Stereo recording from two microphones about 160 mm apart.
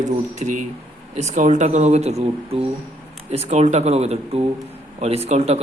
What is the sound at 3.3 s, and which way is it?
A man's voice, 45° right (ahead or behind).